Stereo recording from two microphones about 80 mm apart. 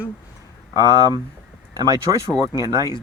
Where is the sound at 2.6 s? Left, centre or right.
Right.